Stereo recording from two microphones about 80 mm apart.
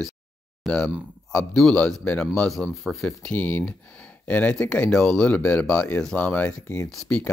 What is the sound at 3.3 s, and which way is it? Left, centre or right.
Speech, centre.